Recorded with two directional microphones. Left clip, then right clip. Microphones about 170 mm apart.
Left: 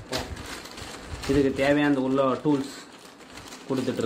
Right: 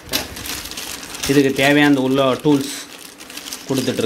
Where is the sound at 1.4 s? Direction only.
45° right (ahead or behind).